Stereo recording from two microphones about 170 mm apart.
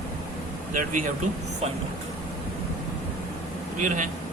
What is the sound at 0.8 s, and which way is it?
Speech, 50° right (ahead or behind).